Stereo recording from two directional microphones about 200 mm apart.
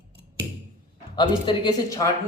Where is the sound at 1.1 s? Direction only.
20° left (ahead or behind).